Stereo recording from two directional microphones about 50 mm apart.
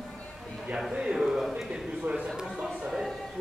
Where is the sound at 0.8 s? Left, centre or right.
Centre.